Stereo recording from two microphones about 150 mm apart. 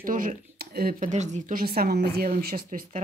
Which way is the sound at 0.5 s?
85° right.